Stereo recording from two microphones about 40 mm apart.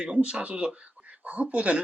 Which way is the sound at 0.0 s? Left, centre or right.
Right.